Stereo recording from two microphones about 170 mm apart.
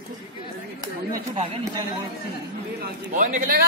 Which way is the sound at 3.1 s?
50° right (ahead or behind).